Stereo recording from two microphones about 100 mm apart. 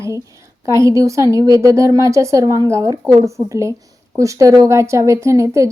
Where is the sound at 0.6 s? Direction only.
30° right (ahead or behind).